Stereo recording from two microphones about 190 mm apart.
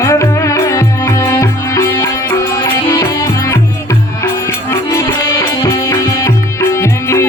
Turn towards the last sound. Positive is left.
turn(degrees=15)  # may be behind; listen again after turning